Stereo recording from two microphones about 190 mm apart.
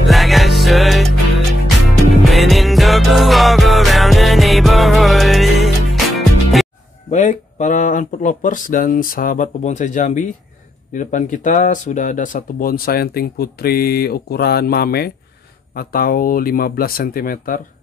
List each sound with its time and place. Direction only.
0.1 s music: centre (ahead or behind)
2.2 s music: centre (ahead or behind)
7.1 s speech: 40° left (ahead or behind)